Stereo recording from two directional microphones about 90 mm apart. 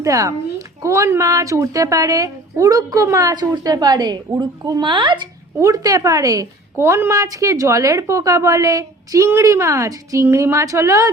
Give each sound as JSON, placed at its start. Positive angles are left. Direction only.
{"t": 0.0, "sound": "a woman's voice", "side_deg": -35}
{"t": 3.3, "sound": "a woman's voice", "side_deg": -50}
{"t": 4.8, "sound": "speech", "side_deg": -60}
{"t": 5.5, "sound": "a woman's voice", "side_deg": -40}